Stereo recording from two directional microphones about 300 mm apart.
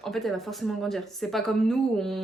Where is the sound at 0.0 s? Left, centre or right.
Centre.